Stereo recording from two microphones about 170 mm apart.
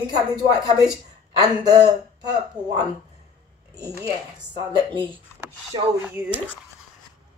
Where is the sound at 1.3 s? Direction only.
20° right (ahead or behind).